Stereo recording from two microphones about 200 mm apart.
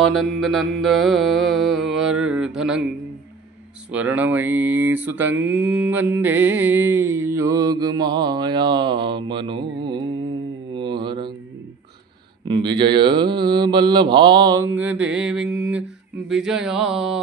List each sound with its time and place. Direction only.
0.0 s mantra: centre (ahead or behind)
3.9 s mantra: 5° right (ahead or behind); by 11.3 s 25° right (ahead or behind)
12.4 s mantra: 20° right (ahead or behind); by 15.4 s 5° right (ahead or behind)
15.4 s mantra: 65° right (ahead or behind)
16.3 s mantra: centre (ahead or behind)